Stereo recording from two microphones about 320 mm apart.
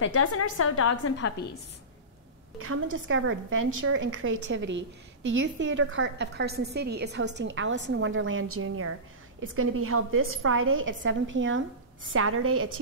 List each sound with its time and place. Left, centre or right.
0.0 s a woman's voice: left
2.6 s a woman's voice: right